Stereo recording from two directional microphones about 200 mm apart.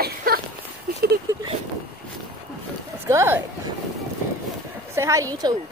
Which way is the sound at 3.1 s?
15° right (ahead or behind).